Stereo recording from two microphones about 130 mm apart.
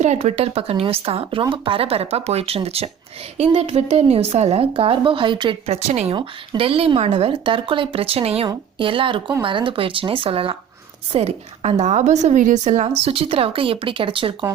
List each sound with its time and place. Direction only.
0.0 s speech: 60° right (ahead or behind); by 5.5 s 35° right (ahead or behind)
5.6 s speech: 55° right (ahead or behind)
6.1 s speech: 40° right (ahead or behind)
11.8 s speech: 65° right (ahead or behind); by 14.3 s 40° right (ahead or behind)